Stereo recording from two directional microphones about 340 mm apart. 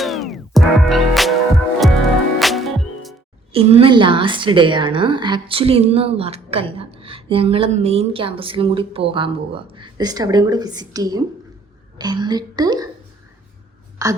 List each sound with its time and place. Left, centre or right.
0.0 s music: centre
3.5 s a woman's voice: centre
14.0 s a woman's voice: centre